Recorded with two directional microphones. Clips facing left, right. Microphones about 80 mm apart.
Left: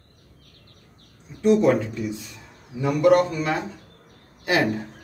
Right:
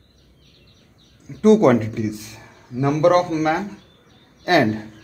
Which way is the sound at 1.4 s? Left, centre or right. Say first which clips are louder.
Right 5 dB; right.